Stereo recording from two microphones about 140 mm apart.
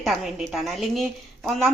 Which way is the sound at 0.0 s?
Centre (ahead or behind).